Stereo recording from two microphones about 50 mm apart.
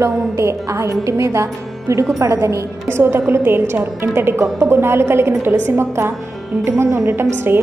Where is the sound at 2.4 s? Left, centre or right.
Right.